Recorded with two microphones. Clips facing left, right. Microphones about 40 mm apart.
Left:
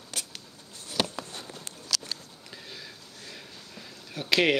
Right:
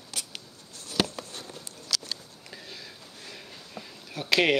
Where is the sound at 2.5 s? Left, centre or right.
Centre.